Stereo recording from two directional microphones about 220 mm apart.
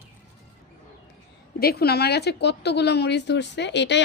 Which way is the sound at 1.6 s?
45° left (ahead or behind).